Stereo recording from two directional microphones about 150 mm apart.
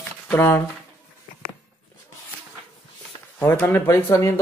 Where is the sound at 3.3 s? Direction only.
10° left (ahead or behind).